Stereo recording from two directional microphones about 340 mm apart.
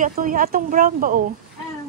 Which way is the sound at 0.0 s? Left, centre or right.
Right.